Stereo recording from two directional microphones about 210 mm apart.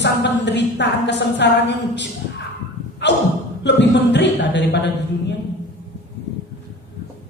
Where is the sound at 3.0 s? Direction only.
55° left (ahead or behind).